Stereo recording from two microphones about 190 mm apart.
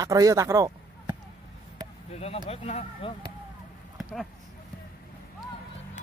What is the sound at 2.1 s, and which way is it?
Speech, 30° left (ahead or behind).